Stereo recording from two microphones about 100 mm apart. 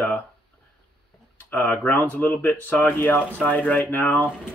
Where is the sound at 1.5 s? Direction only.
20° left (ahead or behind).